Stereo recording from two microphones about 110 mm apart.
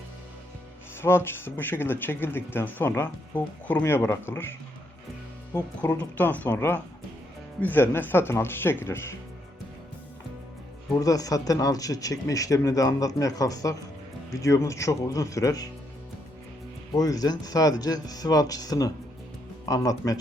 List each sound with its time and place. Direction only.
1.0 s speech: 20° left (ahead or behind)
6.0 s speech: 15° left (ahead or behind)
10.9 s speech: 35° left (ahead or behind)
16.9 s speech: 35° left (ahead or behind)